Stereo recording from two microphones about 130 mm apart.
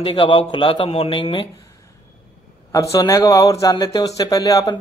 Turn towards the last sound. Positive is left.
turn(degrees=25)  # may be behind; listen again after turning